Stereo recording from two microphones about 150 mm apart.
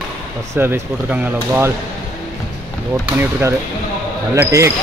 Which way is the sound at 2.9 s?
15° right (ahead or behind).